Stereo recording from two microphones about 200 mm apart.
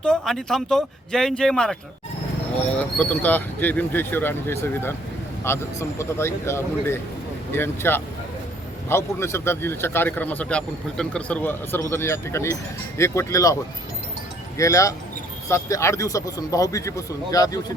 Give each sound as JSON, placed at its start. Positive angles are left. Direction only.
{"t": 0.0, "sound": "speech", "side_deg": 5}
{"t": 2.7, "sound": "a man's voice", "side_deg": 5}
{"t": 14.6, "sound": "a man's voice", "side_deg": 15}